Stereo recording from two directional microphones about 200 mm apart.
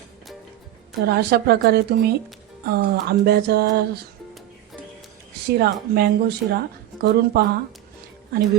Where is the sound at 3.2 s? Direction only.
50° right (ahead or behind).